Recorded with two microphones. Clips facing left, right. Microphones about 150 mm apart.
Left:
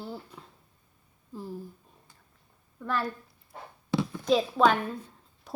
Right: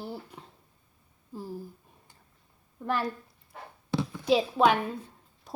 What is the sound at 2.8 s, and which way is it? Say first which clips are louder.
Speech: right 1 dB; 15° right (ahead or behind).